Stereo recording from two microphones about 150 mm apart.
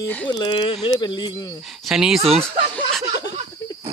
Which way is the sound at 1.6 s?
Centre (ahead or behind).